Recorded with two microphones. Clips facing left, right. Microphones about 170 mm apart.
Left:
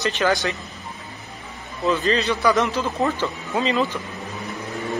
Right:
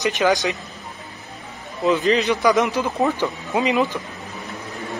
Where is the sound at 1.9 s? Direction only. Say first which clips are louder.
Right 3 dB; 15° right (ahead or behind).